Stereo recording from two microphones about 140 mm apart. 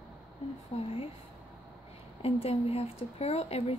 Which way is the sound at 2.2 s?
45° left (ahead or behind).